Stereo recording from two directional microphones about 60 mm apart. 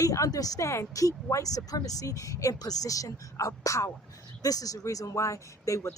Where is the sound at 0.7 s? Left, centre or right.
Left.